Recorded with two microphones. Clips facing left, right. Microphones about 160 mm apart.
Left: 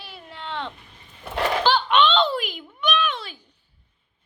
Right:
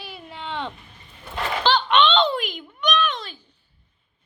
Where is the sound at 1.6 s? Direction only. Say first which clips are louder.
Right 2 dB; 5° left (ahead or behind).